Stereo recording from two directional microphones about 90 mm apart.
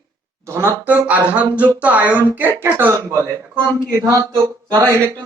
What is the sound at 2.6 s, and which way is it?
A man's voice, 25° right (ahead or behind).